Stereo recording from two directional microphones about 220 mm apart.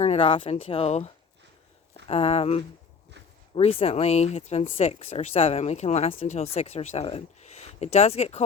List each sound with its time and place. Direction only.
0.0 s speech: 25° left (ahead or behind)